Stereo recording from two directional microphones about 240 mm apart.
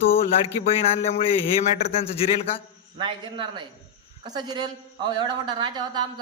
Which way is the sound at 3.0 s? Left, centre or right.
Centre.